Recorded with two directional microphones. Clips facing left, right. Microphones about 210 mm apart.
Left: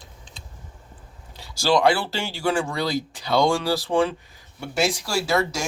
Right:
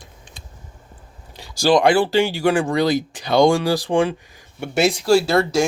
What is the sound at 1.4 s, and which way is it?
Speech, 15° right (ahead or behind).